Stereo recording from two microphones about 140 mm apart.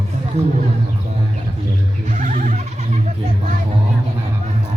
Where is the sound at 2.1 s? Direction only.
70° right (ahead or behind).